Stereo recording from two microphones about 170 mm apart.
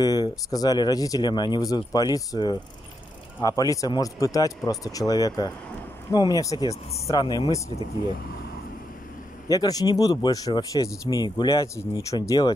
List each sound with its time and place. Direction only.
0.0 s speech: 20° left (ahead or behind)
9.5 s speech: 20° left (ahead or behind)